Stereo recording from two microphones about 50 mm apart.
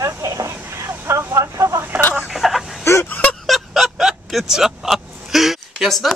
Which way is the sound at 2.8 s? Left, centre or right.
Left.